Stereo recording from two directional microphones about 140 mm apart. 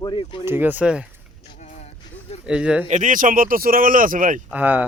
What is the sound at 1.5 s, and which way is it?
Music, 55° left (ahead or behind).